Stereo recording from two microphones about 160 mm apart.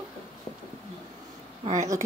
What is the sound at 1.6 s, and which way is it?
Speech, 45° right (ahead or behind).